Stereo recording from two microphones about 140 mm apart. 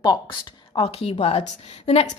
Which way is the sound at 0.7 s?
45° left (ahead or behind).